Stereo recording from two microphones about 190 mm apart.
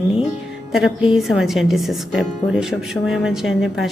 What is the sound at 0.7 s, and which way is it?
A woman's voice, centre (ahead or behind).